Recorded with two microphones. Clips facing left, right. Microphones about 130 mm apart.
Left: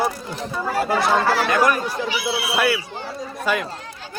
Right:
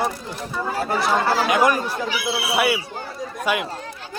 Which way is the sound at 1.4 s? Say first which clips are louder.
Even; 15° right (ahead or behind).